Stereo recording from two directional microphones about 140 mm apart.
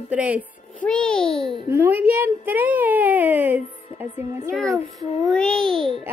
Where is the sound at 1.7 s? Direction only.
15° right (ahead or behind).